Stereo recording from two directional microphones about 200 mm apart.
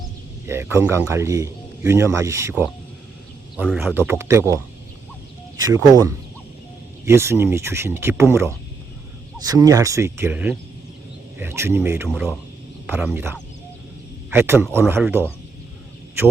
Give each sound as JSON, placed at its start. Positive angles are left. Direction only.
{"t": 0.4, "sound": "a man's voice", "side_deg": -10}
{"t": 7.0, "sound": "a man's voice", "side_deg": -15}
{"t": 12.0, "sound": "speech", "side_deg": 0}
{"t": 14.3, "sound": "a man's voice", "side_deg": -10}